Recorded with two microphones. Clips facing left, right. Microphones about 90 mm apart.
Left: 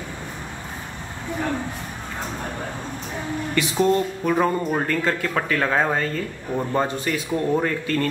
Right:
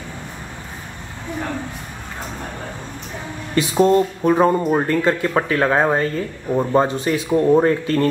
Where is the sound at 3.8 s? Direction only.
30° right (ahead or behind).